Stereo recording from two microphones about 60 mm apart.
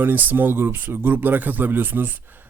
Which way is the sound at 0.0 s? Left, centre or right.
Right.